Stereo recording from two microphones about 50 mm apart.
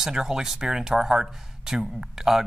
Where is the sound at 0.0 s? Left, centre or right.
Centre.